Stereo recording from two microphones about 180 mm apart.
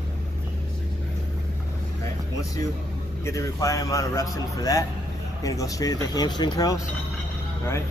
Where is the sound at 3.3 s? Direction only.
20° left (ahead or behind).